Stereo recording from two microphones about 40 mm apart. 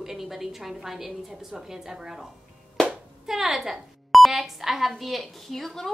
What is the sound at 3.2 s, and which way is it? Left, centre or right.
Speech, centre.